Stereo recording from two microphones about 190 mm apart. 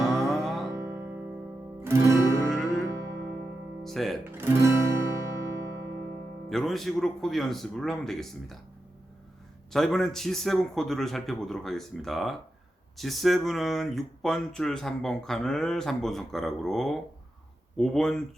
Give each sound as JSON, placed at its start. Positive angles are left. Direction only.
{"t": 0.3, "sound": "music", "side_deg": 0}
{"t": 0.7, "sound": "music", "side_deg": -15}
{"t": 3.8, "sound": "speech", "side_deg": 0}
{"t": 4.4, "sound": "music", "side_deg": -15}
{"t": 6.5, "sound": "speech", "side_deg": 0}
{"t": 9.7, "sound": "speech", "side_deg": 0}